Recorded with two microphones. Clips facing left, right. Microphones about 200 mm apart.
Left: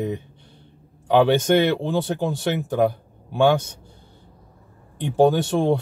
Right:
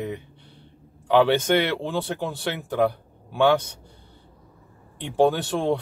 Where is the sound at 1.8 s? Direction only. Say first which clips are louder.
Left 4 dB; 15° left (ahead or behind).